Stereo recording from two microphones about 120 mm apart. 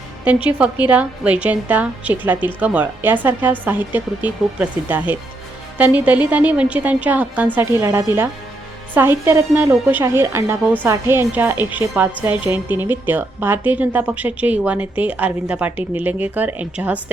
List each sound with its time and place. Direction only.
0.3 s a woman's voice: 10° right (ahead or behind)